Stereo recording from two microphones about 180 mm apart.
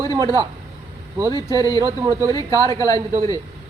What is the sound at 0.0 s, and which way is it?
Speech, 20° right (ahead or behind).